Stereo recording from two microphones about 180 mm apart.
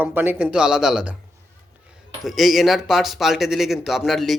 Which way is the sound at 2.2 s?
Centre (ahead or behind).